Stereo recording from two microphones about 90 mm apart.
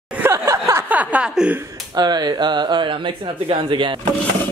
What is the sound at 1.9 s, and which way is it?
Speech, 50° right (ahead or behind).